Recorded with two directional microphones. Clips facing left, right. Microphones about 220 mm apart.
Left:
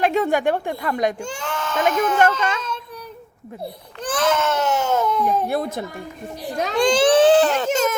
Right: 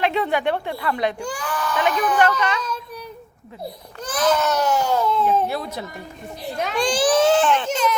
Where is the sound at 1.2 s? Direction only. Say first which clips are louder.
Right 1 dB; 25° left (ahead or behind).